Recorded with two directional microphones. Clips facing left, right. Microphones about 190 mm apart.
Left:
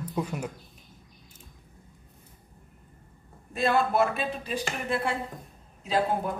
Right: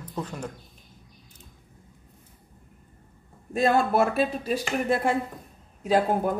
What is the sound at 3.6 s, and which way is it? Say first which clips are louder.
Speech: right 2 dB; 45° right (ahead or behind).